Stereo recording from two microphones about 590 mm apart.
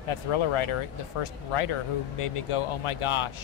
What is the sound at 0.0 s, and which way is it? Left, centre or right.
Speech, left.